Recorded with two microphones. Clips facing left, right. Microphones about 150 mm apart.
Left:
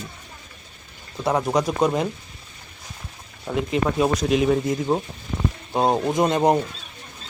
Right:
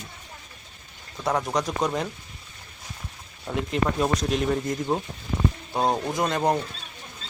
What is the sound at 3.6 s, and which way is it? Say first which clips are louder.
Speech: left 3 dB; centre (ahead or behind).